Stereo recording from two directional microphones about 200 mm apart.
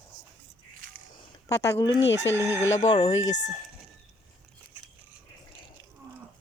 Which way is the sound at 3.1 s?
70° left (ahead or behind).